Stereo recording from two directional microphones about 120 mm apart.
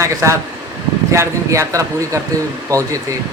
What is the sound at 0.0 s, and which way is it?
A man's voice, 25° right (ahead or behind).